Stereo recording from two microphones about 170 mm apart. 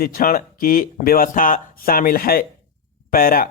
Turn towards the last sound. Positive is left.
turn(degrees=60)  # may be behind; listen again after turning